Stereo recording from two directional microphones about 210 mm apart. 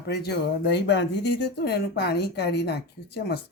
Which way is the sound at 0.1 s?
50° left (ahead or behind).